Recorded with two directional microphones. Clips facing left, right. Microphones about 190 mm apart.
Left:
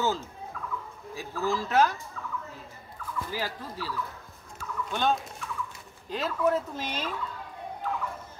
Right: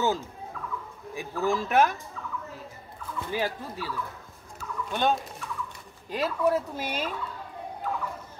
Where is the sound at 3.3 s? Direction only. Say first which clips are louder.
Right 8 dB; 20° right (ahead or behind).